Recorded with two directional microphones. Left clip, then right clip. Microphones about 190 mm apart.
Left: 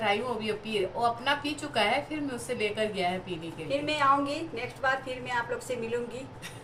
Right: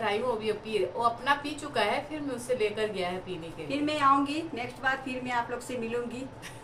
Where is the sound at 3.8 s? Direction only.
20° right (ahead or behind).